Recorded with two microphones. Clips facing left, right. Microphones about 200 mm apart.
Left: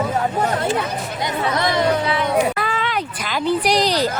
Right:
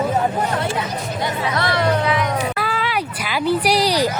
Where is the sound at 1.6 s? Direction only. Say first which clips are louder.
Even; 15° left (ahead or behind).